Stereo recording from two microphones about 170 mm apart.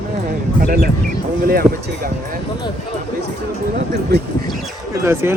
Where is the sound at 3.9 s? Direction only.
75° right (ahead or behind).